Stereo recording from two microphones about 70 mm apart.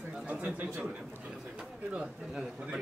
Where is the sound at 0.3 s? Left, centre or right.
Right.